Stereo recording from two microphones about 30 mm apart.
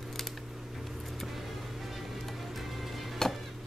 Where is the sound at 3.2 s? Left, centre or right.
Centre.